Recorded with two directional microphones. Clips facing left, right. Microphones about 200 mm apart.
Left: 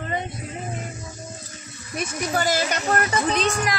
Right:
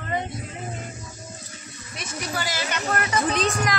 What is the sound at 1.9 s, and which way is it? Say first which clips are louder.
Speech: left 6 dB; 45° left (ahead or behind).